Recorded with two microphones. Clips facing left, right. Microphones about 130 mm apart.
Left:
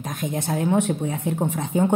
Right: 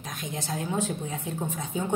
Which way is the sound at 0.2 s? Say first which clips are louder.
Left 9 dB; 55° left (ahead or behind).